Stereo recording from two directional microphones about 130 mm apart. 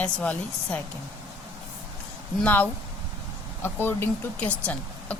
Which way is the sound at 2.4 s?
15° left (ahead or behind).